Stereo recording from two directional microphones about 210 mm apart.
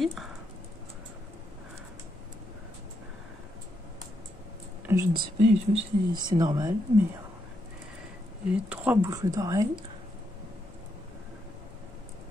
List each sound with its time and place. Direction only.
0.0 s speech: centre (ahead or behind)
4.8 s speech: 15° right (ahead or behind)
5.5 s speech: 30° right (ahead or behind)
8.5 s speech: 5° right (ahead or behind)